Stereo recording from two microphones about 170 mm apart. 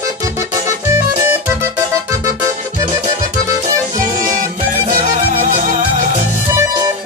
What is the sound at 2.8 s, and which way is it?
Music, 15° right (ahead or behind).